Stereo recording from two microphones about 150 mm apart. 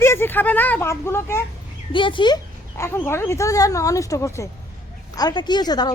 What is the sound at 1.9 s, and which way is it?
Speech, 35° left (ahead or behind).